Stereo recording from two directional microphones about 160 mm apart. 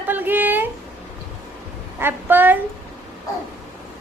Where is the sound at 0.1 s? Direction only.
10° right (ahead or behind).